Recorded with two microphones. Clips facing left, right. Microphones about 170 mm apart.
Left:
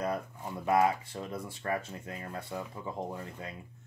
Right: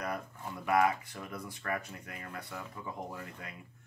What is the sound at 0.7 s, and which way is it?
Speech, 25° left (ahead or behind).